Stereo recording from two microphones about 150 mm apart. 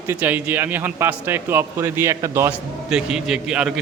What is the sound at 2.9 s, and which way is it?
Speech, 5° right (ahead or behind).